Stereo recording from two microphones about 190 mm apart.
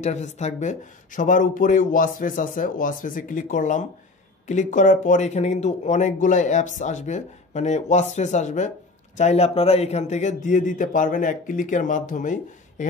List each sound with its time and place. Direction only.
0.0 s speech: 40° left (ahead or behind)